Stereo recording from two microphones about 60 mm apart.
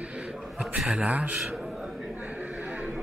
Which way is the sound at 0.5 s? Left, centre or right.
Centre.